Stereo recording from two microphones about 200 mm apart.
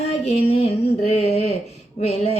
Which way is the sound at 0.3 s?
30° left (ahead or behind).